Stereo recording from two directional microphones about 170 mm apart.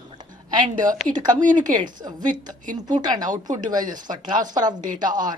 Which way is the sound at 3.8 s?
50° right (ahead or behind).